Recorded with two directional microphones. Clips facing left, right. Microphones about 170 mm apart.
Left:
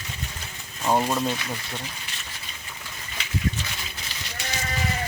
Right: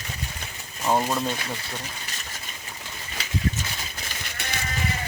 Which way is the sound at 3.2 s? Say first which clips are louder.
Right 1 dB; 40° right (ahead or behind).